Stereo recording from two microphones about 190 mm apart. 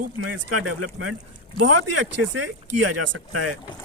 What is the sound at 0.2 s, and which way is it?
Speech, 90° right.